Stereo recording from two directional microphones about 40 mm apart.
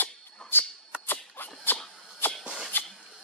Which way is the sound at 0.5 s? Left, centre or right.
Left.